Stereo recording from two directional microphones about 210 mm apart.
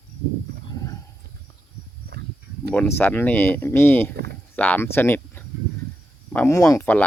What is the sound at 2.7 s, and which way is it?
Speech, 10° left (ahead or behind).